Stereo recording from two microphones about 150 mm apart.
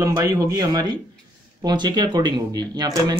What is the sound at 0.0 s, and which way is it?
Speech, 20° right (ahead or behind).